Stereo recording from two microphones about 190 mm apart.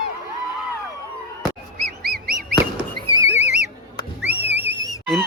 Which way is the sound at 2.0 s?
55° right (ahead or behind).